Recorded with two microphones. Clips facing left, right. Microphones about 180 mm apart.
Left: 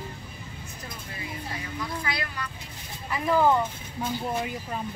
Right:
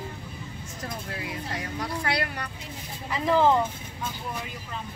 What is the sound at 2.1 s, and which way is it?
Music, 65° right (ahead or behind).